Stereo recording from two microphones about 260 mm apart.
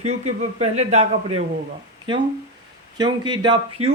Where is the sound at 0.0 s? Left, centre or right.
Right.